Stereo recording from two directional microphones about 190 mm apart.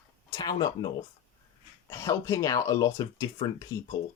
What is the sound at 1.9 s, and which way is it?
Speech, 15° left (ahead or behind).